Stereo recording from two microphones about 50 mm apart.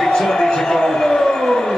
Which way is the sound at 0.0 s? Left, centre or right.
Centre.